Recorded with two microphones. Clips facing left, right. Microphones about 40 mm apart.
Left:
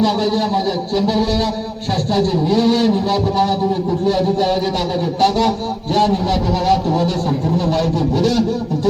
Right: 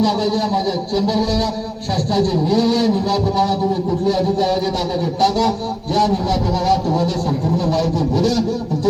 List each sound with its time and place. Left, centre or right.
0.0 s a man's voice: left
5.2 s a man's voice: left
6.7 s a man's voice: left